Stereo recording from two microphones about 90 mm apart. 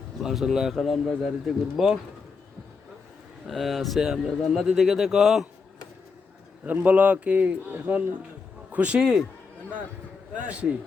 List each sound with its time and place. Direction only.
0.2 s speech: 5° right (ahead or behind)
3.4 s speech: centre (ahead or behind)
6.8 s a man's voice: 15° right (ahead or behind)
10.3 s a man's voice: 15° right (ahead or behind)